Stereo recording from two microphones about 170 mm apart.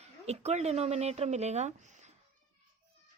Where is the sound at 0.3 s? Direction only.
40° right (ahead or behind).